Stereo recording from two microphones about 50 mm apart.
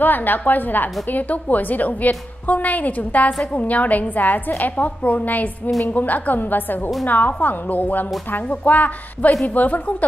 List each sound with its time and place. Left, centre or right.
0.0 s a woman's voice: left